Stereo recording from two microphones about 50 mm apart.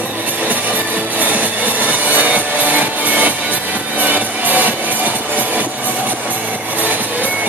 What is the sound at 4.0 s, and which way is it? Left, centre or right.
Music, right.